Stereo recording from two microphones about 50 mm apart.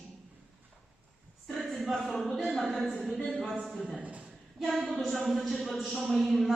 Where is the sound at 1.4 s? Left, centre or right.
Centre.